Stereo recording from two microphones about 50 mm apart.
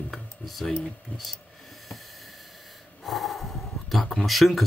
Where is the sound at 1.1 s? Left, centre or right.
Left.